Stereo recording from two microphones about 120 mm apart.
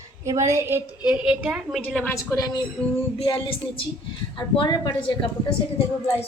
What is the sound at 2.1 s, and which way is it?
Speech, 30° left (ahead or behind).